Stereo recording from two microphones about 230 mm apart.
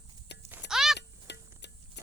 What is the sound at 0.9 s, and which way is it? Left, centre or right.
Music, left.